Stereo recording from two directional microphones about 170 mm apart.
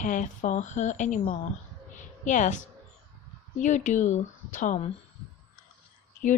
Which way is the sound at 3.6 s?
45° left (ahead or behind).